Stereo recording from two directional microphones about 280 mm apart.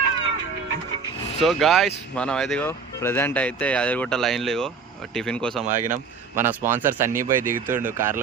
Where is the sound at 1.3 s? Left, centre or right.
Centre.